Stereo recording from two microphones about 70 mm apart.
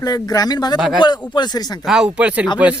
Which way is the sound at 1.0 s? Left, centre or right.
Left.